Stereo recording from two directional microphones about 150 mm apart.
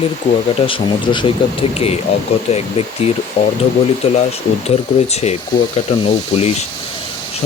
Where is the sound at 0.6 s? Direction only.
35° left (ahead or behind).